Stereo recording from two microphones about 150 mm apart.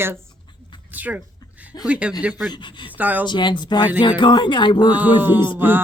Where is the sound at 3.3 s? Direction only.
30° left (ahead or behind).